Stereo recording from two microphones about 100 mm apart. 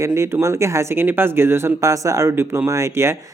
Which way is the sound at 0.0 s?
25° right (ahead or behind).